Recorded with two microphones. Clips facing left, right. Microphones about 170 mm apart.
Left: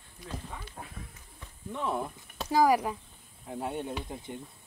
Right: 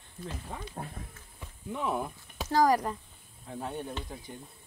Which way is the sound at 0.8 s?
35° right (ahead or behind).